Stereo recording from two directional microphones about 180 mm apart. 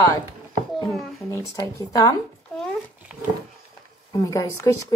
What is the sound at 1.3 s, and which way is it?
Speech, 15° left (ahead or behind).